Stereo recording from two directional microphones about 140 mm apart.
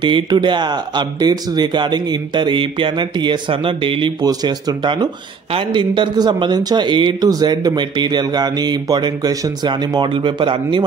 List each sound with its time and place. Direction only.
0.0 s speech: 35° right (ahead or behind)